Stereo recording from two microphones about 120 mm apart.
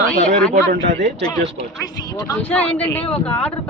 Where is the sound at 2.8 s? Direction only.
10° left (ahead or behind).